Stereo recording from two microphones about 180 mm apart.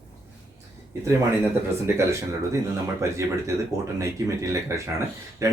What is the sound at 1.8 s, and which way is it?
A man's voice, 15° right (ahead or behind).